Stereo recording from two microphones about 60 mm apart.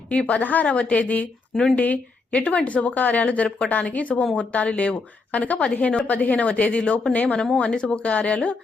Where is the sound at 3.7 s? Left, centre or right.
Left.